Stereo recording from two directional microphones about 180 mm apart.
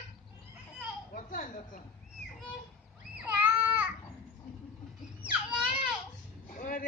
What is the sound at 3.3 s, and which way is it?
Children playing, 10° right (ahead or behind).